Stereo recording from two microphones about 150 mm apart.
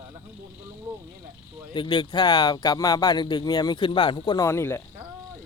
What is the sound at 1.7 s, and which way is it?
Speech, 30° left (ahead or behind).